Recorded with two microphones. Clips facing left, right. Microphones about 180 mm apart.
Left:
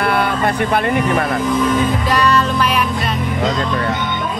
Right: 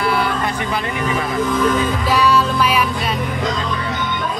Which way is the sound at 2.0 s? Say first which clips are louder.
Even; 5° right (ahead or behind).